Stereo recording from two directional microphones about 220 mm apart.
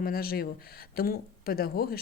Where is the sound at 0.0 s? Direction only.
40° left (ahead or behind).